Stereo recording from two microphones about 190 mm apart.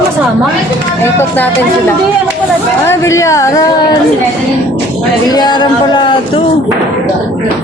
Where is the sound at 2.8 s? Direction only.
15° left (ahead or behind).